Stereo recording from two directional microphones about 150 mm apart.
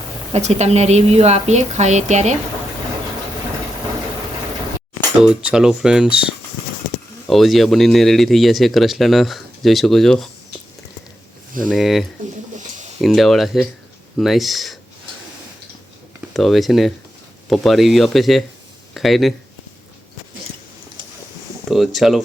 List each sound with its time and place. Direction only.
0.3 s a woman's voice: 45° right (ahead or behind)
5.2 s speech: 5° right (ahead or behind)
11.6 s speech: centre (ahead or behind)
12.5 s a sound: 55° right (ahead or behind)
13.0 s speech: centre (ahead or behind)
16.3 s speech: centre (ahead or behind)
21.7 s speech: centre (ahead or behind)